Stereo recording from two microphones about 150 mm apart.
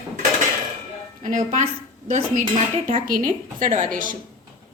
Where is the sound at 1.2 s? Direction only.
60° right (ahead or behind).